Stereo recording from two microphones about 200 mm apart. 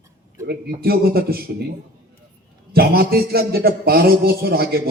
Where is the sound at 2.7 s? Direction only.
50° right (ahead or behind).